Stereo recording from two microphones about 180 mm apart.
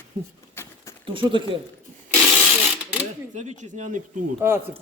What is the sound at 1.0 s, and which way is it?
Speech, 30° right (ahead or behind).